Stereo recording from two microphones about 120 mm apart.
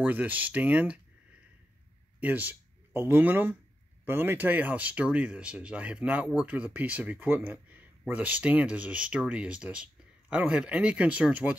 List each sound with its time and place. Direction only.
0.0 s speech: 15° right (ahead or behind)
2.1 s speech: 15° right (ahead or behind)